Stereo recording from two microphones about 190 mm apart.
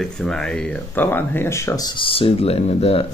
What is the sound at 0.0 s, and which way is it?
Speech, 5° left (ahead or behind).